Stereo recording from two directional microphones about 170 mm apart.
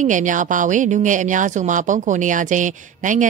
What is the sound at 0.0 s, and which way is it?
Speech, 50° right (ahead or behind).